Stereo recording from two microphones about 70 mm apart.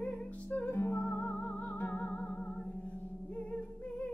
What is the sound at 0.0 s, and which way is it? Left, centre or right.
Music, centre.